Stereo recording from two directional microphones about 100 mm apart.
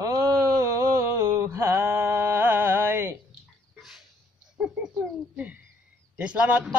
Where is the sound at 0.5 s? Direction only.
30° right (ahead or behind).